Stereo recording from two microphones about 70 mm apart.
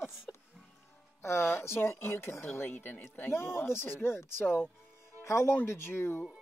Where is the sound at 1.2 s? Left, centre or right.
Left.